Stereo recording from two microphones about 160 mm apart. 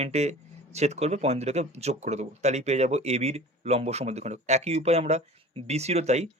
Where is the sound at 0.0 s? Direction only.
45° right (ahead or behind).